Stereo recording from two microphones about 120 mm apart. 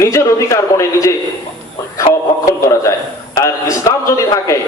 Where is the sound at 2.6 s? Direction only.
25° left (ahead or behind).